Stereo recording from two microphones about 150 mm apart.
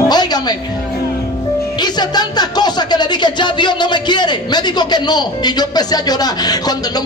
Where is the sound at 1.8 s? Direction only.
30° left (ahead or behind).